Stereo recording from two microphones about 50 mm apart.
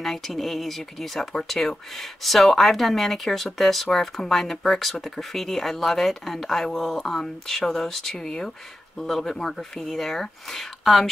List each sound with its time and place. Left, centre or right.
0.0 s speech: centre